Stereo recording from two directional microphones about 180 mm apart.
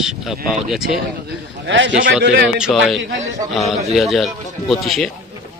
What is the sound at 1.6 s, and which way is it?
Speech, 85° right.